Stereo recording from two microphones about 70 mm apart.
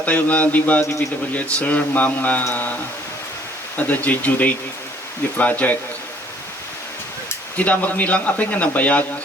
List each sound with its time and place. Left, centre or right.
0.0 s speech: left
3.8 s speech: left
7.5 s speech: left